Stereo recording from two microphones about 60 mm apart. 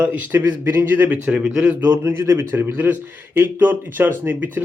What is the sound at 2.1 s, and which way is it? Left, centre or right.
Speech, right.